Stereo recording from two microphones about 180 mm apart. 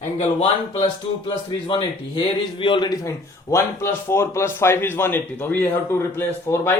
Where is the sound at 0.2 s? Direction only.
35° left (ahead or behind); by 6.7 s 15° left (ahead or behind).